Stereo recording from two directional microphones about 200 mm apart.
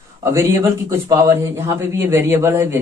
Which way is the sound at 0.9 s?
15° right (ahead or behind).